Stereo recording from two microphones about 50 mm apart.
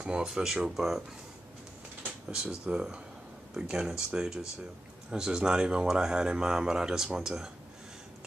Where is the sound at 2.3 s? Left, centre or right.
Centre.